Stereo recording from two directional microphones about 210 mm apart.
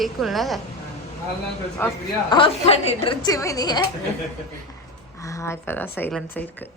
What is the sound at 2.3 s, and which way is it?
A woman's voice, 20° left (ahead or behind).